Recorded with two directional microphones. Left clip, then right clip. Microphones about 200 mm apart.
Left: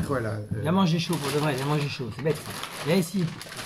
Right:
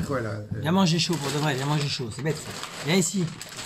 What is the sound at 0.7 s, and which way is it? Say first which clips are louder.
Speech: right 2 dB; 45° right (ahead or behind).